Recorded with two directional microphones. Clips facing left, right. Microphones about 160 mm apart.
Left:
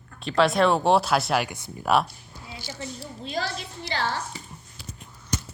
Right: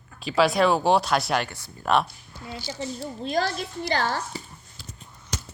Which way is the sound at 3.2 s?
45° right (ahead or behind).